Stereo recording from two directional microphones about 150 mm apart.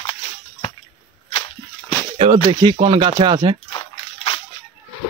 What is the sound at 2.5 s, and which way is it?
Speech, 35° right (ahead or behind).